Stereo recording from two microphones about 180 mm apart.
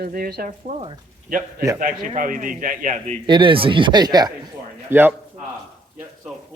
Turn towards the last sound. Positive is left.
turn(degrees=-15)  # may be behind; listen again after turning